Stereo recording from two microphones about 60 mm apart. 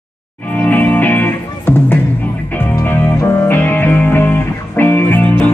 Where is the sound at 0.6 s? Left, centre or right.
Left.